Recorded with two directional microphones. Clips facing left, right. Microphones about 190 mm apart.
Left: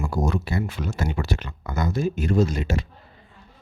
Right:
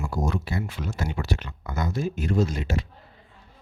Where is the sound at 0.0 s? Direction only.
75° left (ahead or behind).